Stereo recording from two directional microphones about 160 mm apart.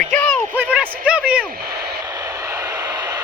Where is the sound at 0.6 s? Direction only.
5° right (ahead or behind).